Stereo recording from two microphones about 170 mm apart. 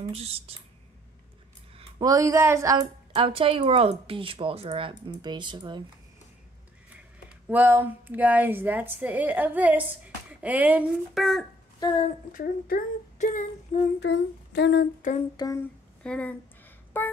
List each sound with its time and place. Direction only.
0.1 s speech: 35° right (ahead or behind)
1.8 s a woman's voice: 25° right (ahead or behind)
7.2 s speech: 10° right (ahead or behind)
11.8 s a woman's voice: 30° left (ahead or behind)
12.3 s speech: 55° left (ahead or behind)
13.9 s a sound: 90° left
15.0 s speech: 45° left (ahead or behind)
15.3 s a woman's voice: 20° left (ahead or behind)
16.0 s speech: 5° left (ahead or behind)
17.0 s a sound: 10° left (ahead or behind)